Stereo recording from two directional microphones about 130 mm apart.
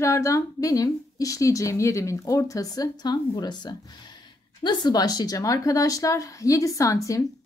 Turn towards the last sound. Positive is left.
turn(degrees=25)  # may be behind; listen again after turning